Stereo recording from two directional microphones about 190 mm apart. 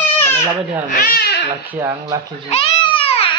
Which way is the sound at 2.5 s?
30° left (ahead or behind).